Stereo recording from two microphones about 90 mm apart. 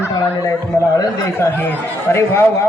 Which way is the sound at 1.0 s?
45° left (ahead or behind).